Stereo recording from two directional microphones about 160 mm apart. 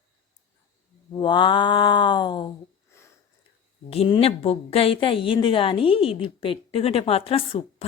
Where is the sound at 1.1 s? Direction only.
30° left (ahead or behind).